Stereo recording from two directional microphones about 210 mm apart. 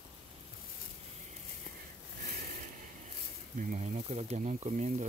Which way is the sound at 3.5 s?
35° right (ahead or behind).